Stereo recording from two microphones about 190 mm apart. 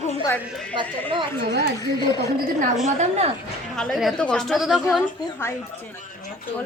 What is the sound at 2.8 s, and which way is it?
Speech, 35° right (ahead or behind).